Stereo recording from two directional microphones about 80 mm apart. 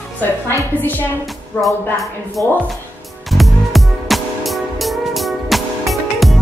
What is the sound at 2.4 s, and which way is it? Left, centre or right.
Speech, left.